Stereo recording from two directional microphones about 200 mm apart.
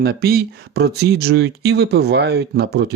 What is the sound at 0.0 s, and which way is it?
Speech, 50° right (ahead or behind).